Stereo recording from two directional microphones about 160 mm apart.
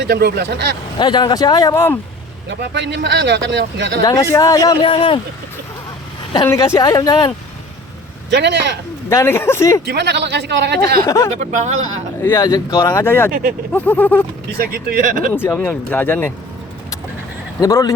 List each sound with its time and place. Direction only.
0.0 s speech: 85° right
0.9 s speech: 25° left (ahead or behind)
2.5 s speech: 90° right
4.0 s speech: 20° left (ahead or behind)
6.5 s speech: 20° left (ahead or behind)
8.3 s speech: 90° right
9.0 s speech: 15° left (ahead or behind)
9.8 s speech: 90° right
11.0 s speech: 15° left (ahead or behind)
11.3 s speech: 50° right (ahead or behind)
12.2 s speech: 20° left (ahead or behind)
14.6 s speech: 65° right (ahead or behind)
15.3 s speech: 10° left (ahead or behind)
17.6 s speech: 20° left (ahead or behind)